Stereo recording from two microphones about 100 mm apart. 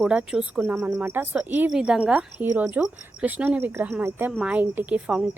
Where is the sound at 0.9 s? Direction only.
20° right (ahead or behind).